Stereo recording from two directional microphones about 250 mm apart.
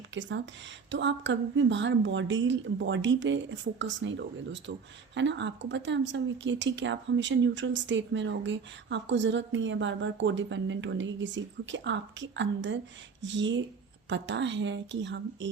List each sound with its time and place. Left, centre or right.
0.1 s a woman's voice: right